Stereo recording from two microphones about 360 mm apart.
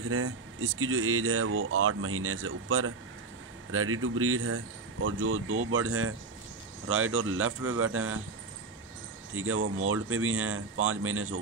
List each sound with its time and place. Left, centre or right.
0.1 s speech: right
9.3 s speech: right